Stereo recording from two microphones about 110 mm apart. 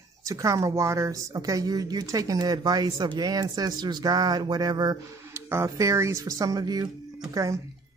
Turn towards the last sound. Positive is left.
turn(degrees=-30)  # may be behind; listen again after turning